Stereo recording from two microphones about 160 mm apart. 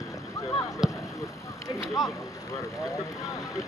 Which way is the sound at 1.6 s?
20° left (ahead or behind).